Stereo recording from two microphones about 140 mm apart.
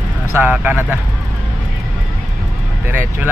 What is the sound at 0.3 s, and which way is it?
Speech, 15° right (ahead or behind).